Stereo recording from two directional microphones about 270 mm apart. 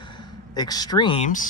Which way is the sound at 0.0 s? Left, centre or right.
Centre.